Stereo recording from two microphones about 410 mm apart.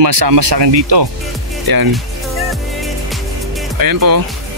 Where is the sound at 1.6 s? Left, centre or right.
Right.